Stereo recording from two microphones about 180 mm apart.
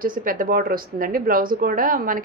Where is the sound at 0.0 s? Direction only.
50° right (ahead or behind).